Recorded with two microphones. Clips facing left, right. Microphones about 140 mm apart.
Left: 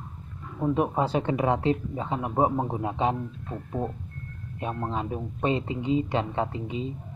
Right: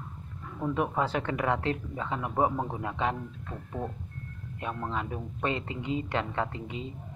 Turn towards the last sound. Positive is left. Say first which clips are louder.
# left 4 dB
turn(degrees=20)  # may be behind; listen again after turning